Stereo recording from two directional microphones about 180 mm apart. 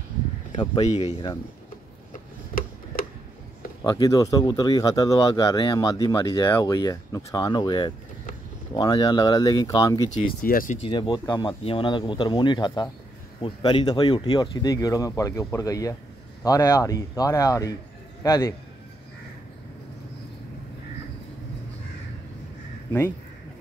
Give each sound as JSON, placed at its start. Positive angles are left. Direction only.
{"t": 0.6, "sound": "speech", "side_deg": 30}
{"t": 2.9, "sound": "a sound", "side_deg": 50}
{"t": 3.8, "sound": "speech", "side_deg": 20}
{"t": 10.1, "sound": "speech", "side_deg": 50}
{"t": 10.8, "sound": "a man's voice", "side_deg": 25}